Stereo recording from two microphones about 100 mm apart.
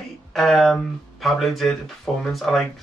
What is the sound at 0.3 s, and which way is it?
Speech, centre (ahead or behind).